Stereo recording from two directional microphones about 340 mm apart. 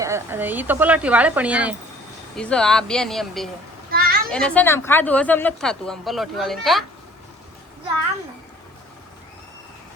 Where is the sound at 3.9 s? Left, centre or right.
Right.